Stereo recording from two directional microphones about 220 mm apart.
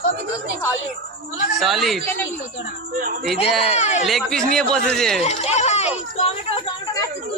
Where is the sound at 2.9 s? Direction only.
40° right (ahead or behind).